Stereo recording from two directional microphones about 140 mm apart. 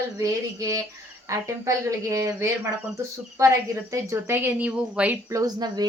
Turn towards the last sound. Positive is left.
turn(degrees=-30)  # may be behind; listen again after turning